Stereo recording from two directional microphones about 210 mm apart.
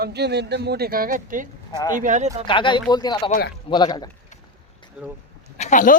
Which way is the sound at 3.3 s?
45° left (ahead or behind).